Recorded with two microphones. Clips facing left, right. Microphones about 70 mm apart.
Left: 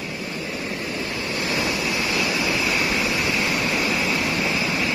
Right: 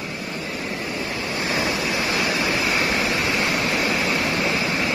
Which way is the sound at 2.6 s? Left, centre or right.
Right.